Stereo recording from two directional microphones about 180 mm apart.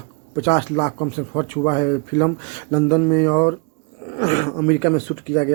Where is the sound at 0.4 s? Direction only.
30° left (ahead or behind).